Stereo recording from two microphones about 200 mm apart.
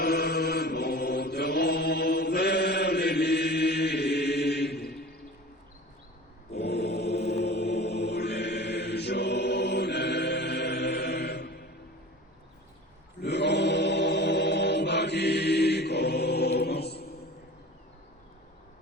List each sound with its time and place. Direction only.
0.0 s chant: 55° left (ahead or behind)
6.5 s mantra: 55° left (ahead or behind)
13.2 s chant: 55° left (ahead or behind)